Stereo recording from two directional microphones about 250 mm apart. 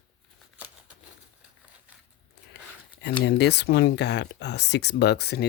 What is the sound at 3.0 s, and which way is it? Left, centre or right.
Speech, left.